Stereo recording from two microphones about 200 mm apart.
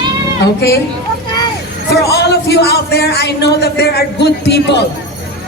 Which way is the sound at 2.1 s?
55° left (ahead or behind).